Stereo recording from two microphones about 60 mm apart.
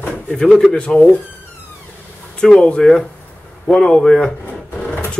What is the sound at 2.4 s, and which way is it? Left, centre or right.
Speech, centre.